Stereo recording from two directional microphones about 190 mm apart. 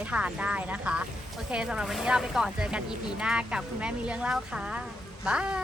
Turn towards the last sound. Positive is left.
turn(degrees=-5)  # may be behind; listen again after turning